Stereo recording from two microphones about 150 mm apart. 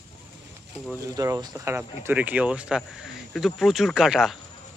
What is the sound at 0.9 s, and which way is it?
Speech, 20° right (ahead or behind).